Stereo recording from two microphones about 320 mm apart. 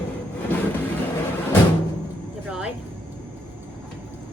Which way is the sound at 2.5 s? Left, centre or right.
Centre.